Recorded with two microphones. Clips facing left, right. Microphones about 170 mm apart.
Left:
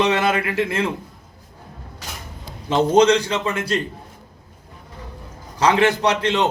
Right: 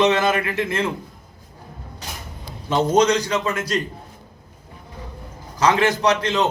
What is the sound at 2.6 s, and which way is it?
A man's voice, 30° left (ahead or behind).